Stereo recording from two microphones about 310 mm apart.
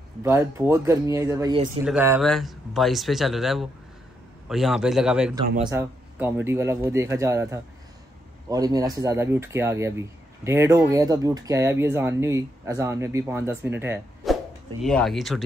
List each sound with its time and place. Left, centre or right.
0.2 s speech: centre